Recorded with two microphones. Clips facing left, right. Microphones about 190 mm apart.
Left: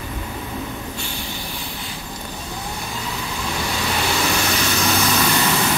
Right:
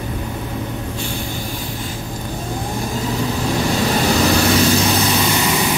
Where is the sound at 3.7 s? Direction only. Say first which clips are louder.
Right 6 dB; 40° right (ahead or behind).